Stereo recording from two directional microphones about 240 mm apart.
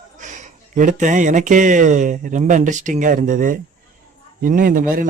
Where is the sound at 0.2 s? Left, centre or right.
Right.